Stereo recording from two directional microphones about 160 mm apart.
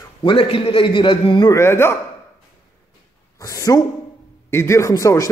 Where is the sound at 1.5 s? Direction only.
15° left (ahead or behind).